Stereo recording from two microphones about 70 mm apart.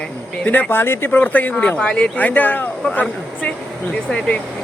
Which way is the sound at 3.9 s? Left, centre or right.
Centre.